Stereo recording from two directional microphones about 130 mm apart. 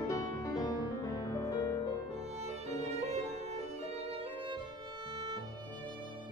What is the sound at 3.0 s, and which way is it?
Violin, 55° right (ahead or behind).